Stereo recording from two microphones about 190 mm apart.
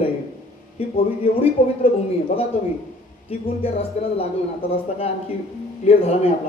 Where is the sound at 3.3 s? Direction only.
30° left (ahead or behind).